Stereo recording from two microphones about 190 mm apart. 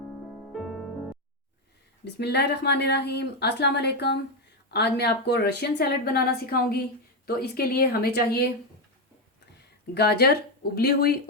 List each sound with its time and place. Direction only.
0.5 s music: centre (ahead or behind)
2.1 s a woman's voice: 60° left (ahead or behind)
9.6 s speech: 60° left (ahead or behind)